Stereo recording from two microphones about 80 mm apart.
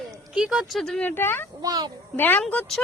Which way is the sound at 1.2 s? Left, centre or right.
Left.